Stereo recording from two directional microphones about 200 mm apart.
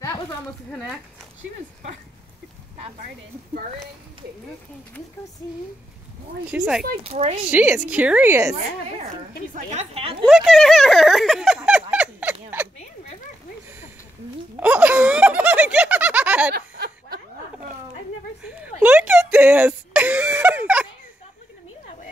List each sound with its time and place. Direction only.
0.7 s speech: centre (ahead or behind)
6.4 s speech: 5° right (ahead or behind)
7.0 s speech: 30° right (ahead or behind)
7.4 s a woman's voice: 5° right (ahead or behind)
9.7 s speech: 30° right (ahead or behind)
10.2 s a sound: centre (ahead or behind)
14.6 s laughter: 5° right (ahead or behind)
16.5 s a sound: 50° right (ahead or behind)
18.8 s a sound: 5° right (ahead or behind)